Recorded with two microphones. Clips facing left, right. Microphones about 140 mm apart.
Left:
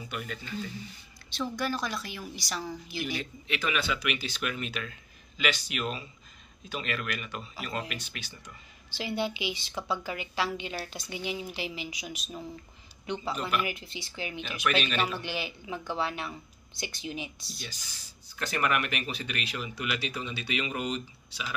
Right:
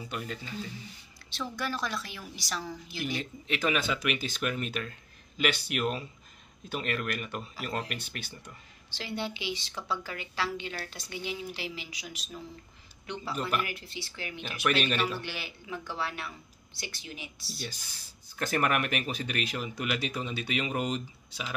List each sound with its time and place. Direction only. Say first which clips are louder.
0.1 s speech: even; 30° right (ahead or behind)
1.3 s a woman's voice: left 3 dB; centre (ahead or behind)
3.4 s speech: right 2 dB; 40° right (ahead or behind)
5.4 s speech: right 2 dB; 55° right (ahead or behind)
8.9 s a woman's voice: left 4 dB; 15° left (ahead or behind)
14.4 s speech: right 1 dB; 40° right (ahead or behind)
15.2 s speech: left 4 dB; 20° left (ahead or behind)
18.3 s speech: right 1 dB; 50° right (ahead or behind)